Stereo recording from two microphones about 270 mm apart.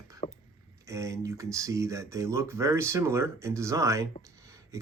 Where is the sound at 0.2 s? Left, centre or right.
Left.